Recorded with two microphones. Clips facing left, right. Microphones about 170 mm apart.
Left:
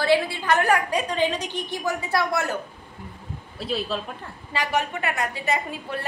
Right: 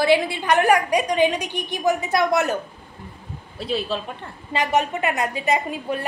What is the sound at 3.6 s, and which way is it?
Speech, centre (ahead or behind).